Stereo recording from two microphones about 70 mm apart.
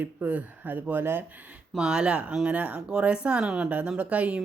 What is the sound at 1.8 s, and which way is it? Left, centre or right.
Speech, centre.